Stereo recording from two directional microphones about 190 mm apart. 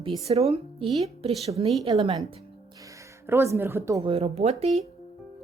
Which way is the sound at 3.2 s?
15° right (ahead or behind).